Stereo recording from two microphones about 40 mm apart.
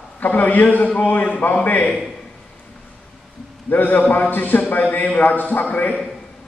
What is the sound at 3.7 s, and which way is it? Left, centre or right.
A man's voice, left.